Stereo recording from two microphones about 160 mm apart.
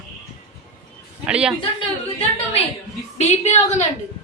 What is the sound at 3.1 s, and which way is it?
Speech, 45° left (ahead or behind).